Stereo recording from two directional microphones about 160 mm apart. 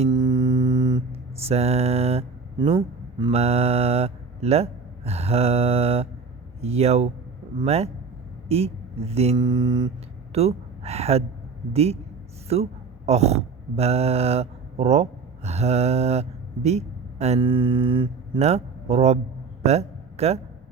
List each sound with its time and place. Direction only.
0.1 s mantra: 25° right (ahead or behind)
1.4 s mantra: 40° right (ahead or behind)
2.6 s a man's voice: 30° right (ahead or behind)
3.3 s speech: 40° right (ahead or behind)
6.6 s mantra: 40° right (ahead or behind)
8.4 s speech: 40° right (ahead or behind)
9.3 s mantra: 30° right (ahead or behind)
10.3 s speech: 40° right (ahead or behind)
11.7 s mantra: 40° right (ahead or behind)
13.1 s speech: 45° right (ahead or behind)
15.4 s mantra: 40° right (ahead or behind)
16.6 s a man's voice: 45° right (ahead or behind)